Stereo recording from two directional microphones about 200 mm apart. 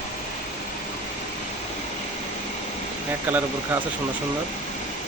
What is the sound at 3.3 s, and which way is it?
Speech, 10° right (ahead or behind).